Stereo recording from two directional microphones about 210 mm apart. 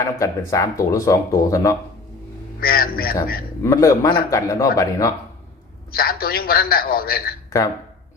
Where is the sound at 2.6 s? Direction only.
45° left (ahead or behind).